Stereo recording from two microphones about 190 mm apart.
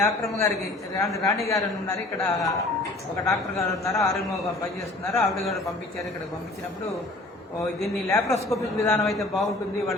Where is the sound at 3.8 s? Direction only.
15° left (ahead or behind).